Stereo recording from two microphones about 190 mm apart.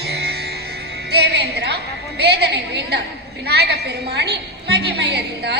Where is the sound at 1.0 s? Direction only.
60° right (ahead or behind).